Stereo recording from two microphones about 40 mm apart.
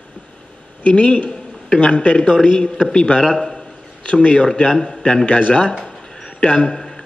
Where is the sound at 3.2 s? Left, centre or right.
Centre.